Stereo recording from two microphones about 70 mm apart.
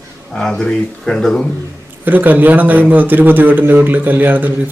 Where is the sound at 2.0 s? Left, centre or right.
Right.